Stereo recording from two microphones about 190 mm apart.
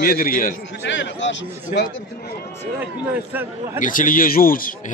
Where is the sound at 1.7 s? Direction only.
60° left (ahead or behind).